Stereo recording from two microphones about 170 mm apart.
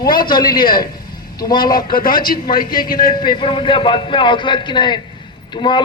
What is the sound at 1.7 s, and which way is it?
A man's voice, 60° left (ahead or behind).